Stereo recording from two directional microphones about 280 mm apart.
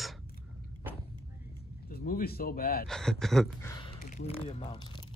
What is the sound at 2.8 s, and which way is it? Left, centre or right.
Speech, centre.